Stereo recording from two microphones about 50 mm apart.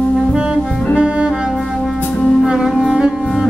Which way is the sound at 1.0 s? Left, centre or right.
Right.